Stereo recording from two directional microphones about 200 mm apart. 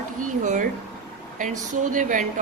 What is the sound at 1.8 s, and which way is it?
Speech, 40° right (ahead or behind).